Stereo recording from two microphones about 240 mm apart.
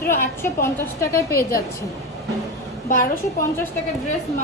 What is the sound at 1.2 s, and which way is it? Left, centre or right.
Speech, left.